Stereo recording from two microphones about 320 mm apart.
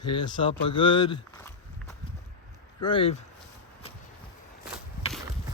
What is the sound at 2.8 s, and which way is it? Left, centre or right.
Speech, centre.